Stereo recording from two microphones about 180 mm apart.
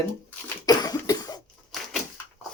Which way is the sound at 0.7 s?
20° left (ahead or behind).